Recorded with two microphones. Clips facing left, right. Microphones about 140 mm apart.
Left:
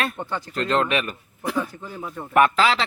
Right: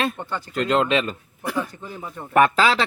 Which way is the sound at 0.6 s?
20° right (ahead or behind).